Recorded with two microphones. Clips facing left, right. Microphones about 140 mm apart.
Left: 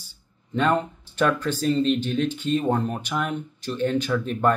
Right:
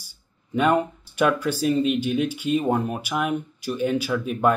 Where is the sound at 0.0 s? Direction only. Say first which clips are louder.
Left 2 dB; 10° right (ahead or behind).